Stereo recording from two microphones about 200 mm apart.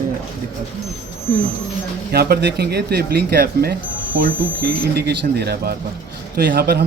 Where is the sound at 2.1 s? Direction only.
50° right (ahead or behind).